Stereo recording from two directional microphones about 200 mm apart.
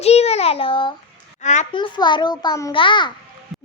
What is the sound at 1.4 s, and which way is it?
Speech, 35° left (ahead or behind).